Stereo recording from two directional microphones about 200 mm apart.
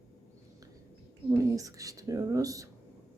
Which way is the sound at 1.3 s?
15° right (ahead or behind).